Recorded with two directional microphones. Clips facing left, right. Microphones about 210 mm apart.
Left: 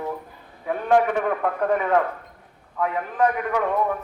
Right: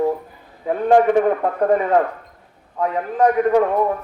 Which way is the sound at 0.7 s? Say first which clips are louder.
Right 5 dB; 35° right (ahead or behind).